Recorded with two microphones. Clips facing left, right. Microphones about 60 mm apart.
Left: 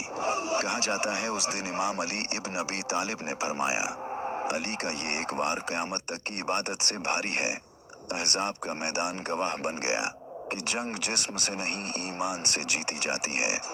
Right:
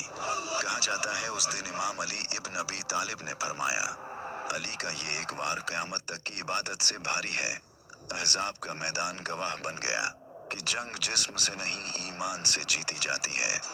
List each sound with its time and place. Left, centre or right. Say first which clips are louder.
0.2 s speech: left 4 dB; left
4.1 s a sound: left 6 dB; centre
4.4 s speech: left 4 dB; left